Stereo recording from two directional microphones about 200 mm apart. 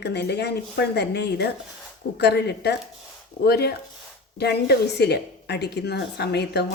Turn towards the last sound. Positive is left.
turn(degrees=55)  # may be behind; listen again after turning